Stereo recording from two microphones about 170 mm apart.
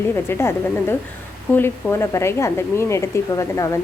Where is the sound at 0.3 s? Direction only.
15° left (ahead or behind).